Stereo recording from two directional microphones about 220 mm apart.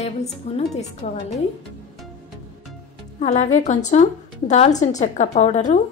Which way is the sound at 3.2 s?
30° left (ahead or behind).